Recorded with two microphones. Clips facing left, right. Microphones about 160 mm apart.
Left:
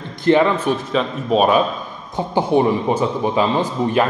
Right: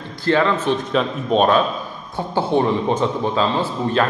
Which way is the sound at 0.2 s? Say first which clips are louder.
Left 3 dB; 15° left (ahead or behind).